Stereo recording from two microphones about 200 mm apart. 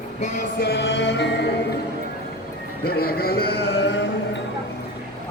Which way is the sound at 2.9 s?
50° left (ahead or behind).